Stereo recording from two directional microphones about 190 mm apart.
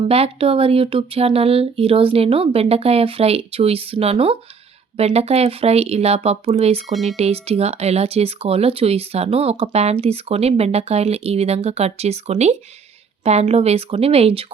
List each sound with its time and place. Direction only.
0.1 s speech: 30° right (ahead or behind)
6.8 s speech: centre (ahead or behind)
7.2 s speech: 30° right (ahead or behind)